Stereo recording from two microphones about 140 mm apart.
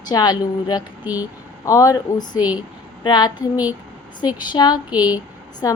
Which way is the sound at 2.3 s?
10° right (ahead or behind).